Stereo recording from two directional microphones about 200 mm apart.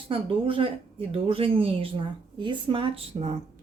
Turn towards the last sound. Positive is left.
turn(degrees=-30)  # may be behind; listen again after turning